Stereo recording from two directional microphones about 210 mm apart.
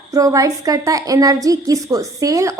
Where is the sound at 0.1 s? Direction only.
15° right (ahead or behind).